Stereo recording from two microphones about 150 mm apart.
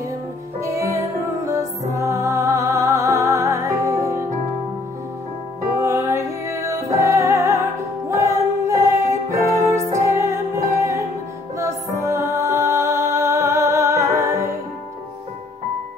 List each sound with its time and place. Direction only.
0.6 s music: 20° right (ahead or behind)
5.7 s music: 20° right (ahead or behind)